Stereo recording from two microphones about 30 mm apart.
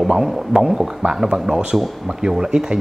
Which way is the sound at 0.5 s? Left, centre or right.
Centre.